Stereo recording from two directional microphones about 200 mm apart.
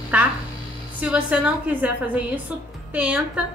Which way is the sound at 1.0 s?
5° right (ahead or behind).